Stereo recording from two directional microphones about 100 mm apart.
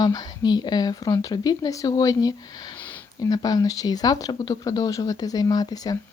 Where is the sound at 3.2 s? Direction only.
40° left (ahead or behind).